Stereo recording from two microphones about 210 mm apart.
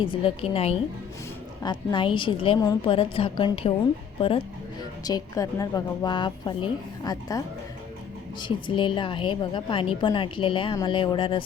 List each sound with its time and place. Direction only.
0.0 s a woman's voice: 25° left (ahead or behind)
4.8 s a woman's voice: 20° left (ahead or behind)